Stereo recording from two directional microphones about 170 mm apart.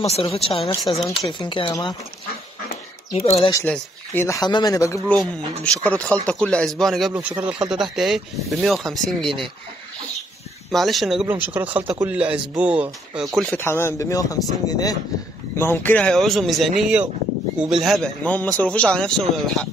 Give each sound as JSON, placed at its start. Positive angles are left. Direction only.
{"t": 0.1, "sound": "speech", "side_deg": 35}
{"t": 3.2, "sound": "speech", "side_deg": 35}
{"t": 3.6, "sound": "speech", "side_deg": 10}
{"t": 10.7, "sound": "a man's voice", "side_deg": 0}
{"t": 13.4, "sound": "a man's voice", "side_deg": 10}